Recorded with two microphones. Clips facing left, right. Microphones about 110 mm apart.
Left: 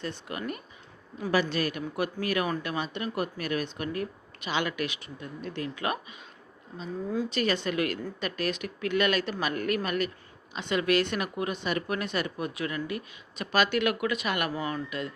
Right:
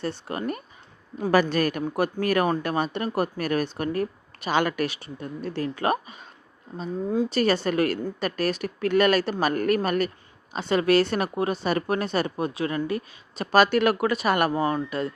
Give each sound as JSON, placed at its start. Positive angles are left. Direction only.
{"t": 0.0, "sound": "speech", "side_deg": -35}
{"t": 1.3, "sound": "speech", "side_deg": -50}
{"t": 7.3, "sound": "speech", "side_deg": -40}